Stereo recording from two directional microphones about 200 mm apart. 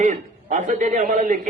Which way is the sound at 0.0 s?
40° right (ahead or behind).